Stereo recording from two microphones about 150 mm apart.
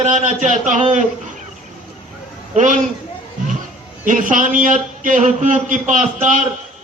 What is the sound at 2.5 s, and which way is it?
Speech, 55° right (ahead or behind).